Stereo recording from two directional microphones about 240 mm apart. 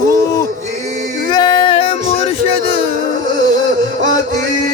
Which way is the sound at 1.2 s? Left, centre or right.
Centre.